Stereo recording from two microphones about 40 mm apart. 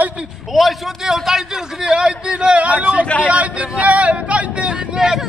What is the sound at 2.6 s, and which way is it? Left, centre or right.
Speech, right.